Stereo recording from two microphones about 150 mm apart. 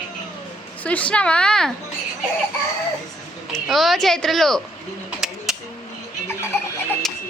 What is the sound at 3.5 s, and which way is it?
A child's voice, centre (ahead or behind).